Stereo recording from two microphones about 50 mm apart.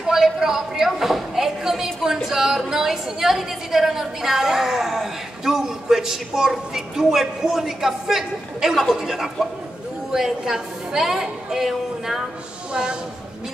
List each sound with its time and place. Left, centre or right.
0.0 s a woman's voice: centre